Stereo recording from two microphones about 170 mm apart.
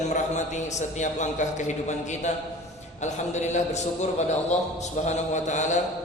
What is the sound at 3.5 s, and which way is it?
Mantra, 40° left (ahead or behind).